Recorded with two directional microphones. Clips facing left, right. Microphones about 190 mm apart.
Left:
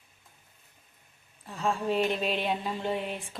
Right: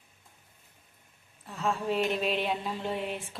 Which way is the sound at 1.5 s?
Centre (ahead or behind).